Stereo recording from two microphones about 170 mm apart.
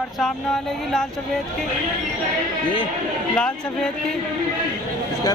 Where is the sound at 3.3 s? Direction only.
5° left (ahead or behind).